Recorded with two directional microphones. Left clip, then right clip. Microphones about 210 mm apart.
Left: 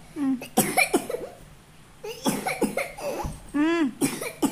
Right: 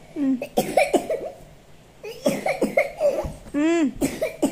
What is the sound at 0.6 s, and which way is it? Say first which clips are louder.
Cough: right 3 dB; 20° left (ahead or behind).